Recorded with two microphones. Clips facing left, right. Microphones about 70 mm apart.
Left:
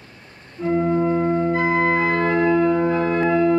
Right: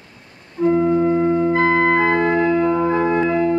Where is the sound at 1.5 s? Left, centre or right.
Right.